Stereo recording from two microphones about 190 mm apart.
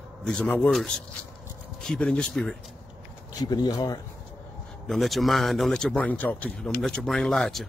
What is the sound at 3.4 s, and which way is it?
Speech, 20° left (ahead or behind).